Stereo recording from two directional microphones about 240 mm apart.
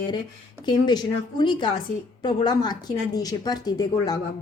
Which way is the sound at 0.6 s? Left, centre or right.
Centre.